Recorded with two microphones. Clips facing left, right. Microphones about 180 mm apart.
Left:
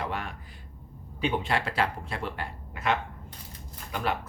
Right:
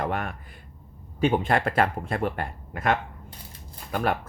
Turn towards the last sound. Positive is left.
turn(degrees=-50)  # may be behind; listen again after turning